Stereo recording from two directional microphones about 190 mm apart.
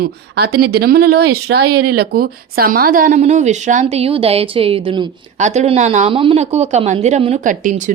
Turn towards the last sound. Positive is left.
turn(degrees=-45)  # may be behind; listen again after turning